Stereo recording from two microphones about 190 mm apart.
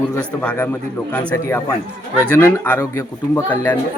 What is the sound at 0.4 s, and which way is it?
Speech, 10° left (ahead or behind).